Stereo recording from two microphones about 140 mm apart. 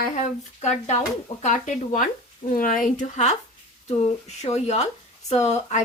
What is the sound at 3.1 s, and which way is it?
Speech, 55° left (ahead or behind).